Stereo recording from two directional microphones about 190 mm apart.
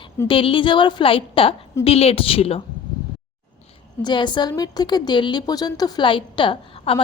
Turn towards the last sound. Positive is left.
turn(degrees=30)  # may be behind; listen again after turning